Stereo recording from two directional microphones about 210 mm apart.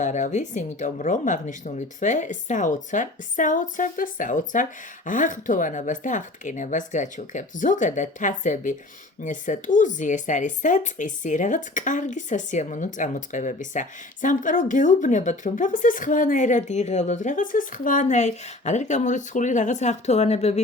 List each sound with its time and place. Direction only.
0.0 s speech: 35° left (ahead or behind)